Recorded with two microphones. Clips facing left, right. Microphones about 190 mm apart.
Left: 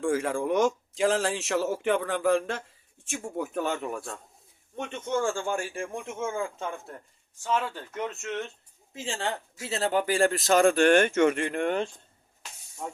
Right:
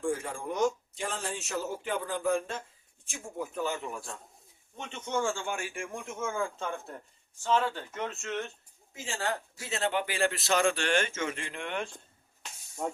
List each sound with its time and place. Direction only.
0.0 s speech: 90° left; by 4.1 s 65° left (ahead or behind)
4.9 s a man's voice: 50° left (ahead or behind); by 6.0 s 35° left (ahead or behind)
6.2 s speech: 20° left (ahead or behind)
7.9 s a man's voice: 20° left (ahead or behind); by 11.7 s 55° left (ahead or behind)